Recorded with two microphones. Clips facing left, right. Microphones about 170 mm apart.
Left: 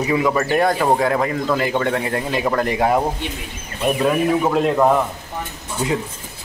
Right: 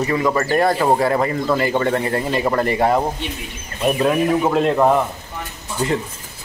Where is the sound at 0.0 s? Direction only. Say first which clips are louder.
Even; 5° left (ahead or behind).